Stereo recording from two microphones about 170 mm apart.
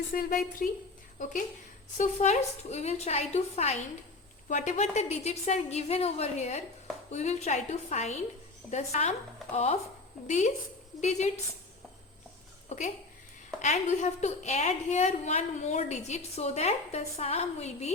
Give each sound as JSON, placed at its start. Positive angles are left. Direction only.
{"t": 0.1, "sound": "a woman's voice", "side_deg": 55}
{"t": 12.6, "sound": "a woman's voice", "side_deg": 45}